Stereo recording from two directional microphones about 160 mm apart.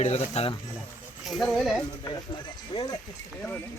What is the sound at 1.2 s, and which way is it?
Speech, centre (ahead or behind).